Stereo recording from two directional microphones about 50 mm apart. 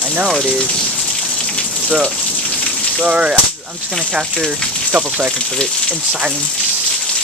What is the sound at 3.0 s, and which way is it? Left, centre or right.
Speech, right.